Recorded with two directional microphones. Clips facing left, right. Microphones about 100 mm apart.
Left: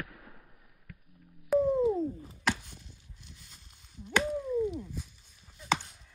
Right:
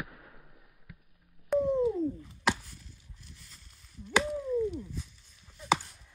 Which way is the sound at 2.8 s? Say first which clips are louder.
Even; 75° left (ahead or behind).